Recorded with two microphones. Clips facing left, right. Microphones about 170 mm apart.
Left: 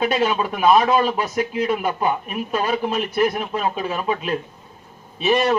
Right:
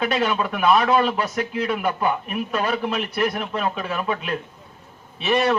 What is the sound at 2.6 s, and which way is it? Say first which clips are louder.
Speech: left 3 dB; 30° left (ahead or behind).